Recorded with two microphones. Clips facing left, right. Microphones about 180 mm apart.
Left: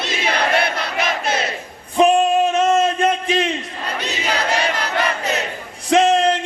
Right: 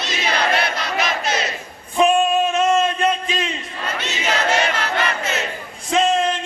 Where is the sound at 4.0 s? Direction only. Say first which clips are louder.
Even; 35° left (ahead or behind).